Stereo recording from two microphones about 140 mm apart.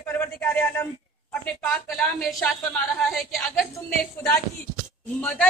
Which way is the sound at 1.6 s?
5° left (ahead or behind).